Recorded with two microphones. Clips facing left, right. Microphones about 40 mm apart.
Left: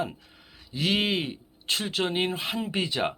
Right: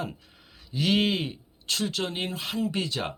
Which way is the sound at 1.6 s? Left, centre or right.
Left.